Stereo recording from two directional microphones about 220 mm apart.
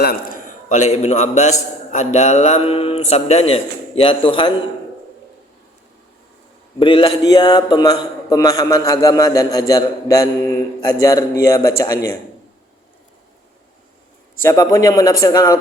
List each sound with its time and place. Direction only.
0.7 s a man's voice: 30° left (ahead or behind)
6.7 s a man's voice: 25° left (ahead or behind)
14.4 s a man's voice: 15° left (ahead or behind)